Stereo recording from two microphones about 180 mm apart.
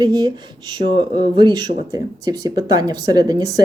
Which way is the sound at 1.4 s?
25° right (ahead or behind).